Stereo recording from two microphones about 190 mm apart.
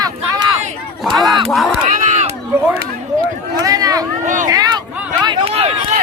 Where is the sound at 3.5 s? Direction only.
20° right (ahead or behind).